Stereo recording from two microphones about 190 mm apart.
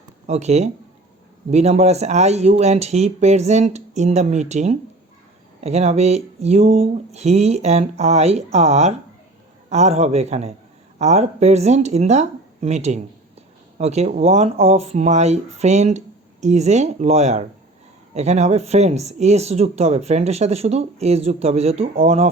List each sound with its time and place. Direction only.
0.3 s speech: 35° right (ahead or behind)